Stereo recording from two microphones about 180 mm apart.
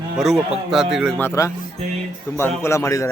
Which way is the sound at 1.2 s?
15° left (ahead or behind).